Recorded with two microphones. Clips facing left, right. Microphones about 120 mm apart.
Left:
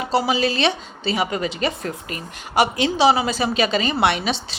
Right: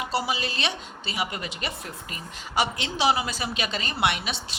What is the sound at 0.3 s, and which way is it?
A woman's voice, 90° left.